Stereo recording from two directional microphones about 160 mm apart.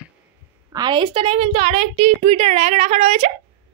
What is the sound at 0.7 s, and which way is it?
A woman's voice, 25° right (ahead or behind).